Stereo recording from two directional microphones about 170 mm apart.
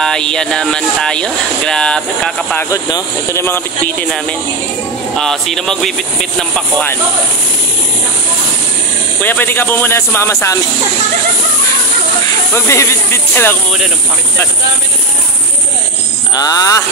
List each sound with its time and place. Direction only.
0.0 s speech: 5° left (ahead or behind)
2.7 s speech: 15° left (ahead or behind)
9.2 s speech: 10° left (ahead or behind)
12.5 s speech: 15° left (ahead or behind)
16.3 s speech: 20° left (ahead or behind)